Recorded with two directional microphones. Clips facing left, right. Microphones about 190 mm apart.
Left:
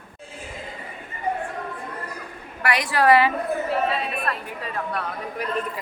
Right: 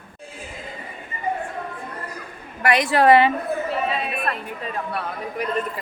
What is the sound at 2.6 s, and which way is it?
Speech, 25° right (ahead or behind).